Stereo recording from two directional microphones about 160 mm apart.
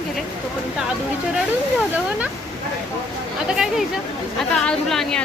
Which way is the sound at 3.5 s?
5° right (ahead or behind).